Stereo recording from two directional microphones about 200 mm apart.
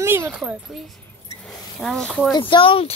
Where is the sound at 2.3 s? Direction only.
25° left (ahead or behind).